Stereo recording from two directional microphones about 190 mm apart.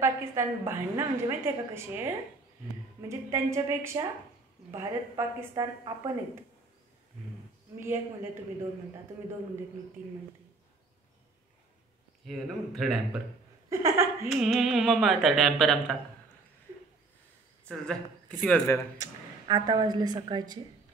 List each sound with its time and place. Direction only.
0.0 s a woman's voice: 15° right (ahead or behind)
7.8 s a woman's voice: 10° right (ahead or behind)
12.3 s speech: centre (ahead or behind)
13.7 s speech: 15° right (ahead or behind)
14.2 s speech: centre (ahead or behind)
18.4 s speech: 10° left (ahead or behind)
18.9 s a woman's voice: 20° right (ahead or behind)